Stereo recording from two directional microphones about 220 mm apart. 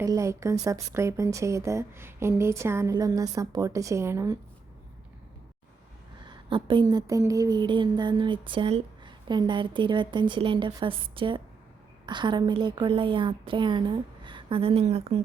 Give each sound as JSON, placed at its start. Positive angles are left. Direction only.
{"t": 0.0, "sound": "a woman's voice", "side_deg": -15}
{"t": 6.2, "sound": "speech", "side_deg": -20}